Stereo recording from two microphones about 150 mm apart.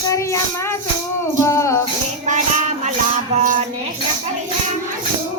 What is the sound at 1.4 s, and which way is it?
Music, 20° left (ahead or behind).